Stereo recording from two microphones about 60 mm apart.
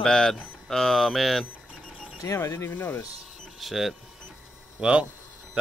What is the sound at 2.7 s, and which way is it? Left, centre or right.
Speech, left.